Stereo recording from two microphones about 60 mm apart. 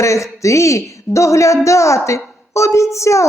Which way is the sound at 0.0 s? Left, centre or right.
Left.